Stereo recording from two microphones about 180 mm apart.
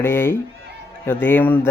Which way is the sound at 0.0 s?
15° left (ahead or behind).